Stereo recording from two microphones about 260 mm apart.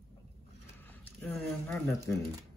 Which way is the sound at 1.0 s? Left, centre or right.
Centre.